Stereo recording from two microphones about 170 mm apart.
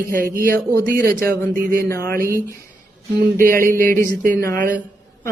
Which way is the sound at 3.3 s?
55° right (ahead or behind).